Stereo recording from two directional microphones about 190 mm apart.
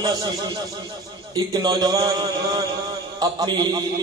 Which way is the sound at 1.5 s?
20° right (ahead or behind).